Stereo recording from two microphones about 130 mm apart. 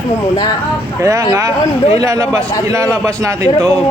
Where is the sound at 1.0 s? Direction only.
25° right (ahead or behind).